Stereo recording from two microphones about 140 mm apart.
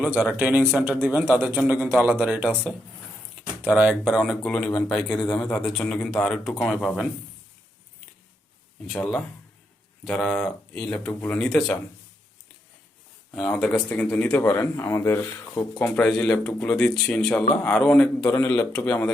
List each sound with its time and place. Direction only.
0.2 s a man's voice: 10° right (ahead or behind)
8.9 s a man's voice: 5° left (ahead or behind)
13.3 s speech: 5° left (ahead or behind)
18.3 s speech: 20° left (ahead or behind)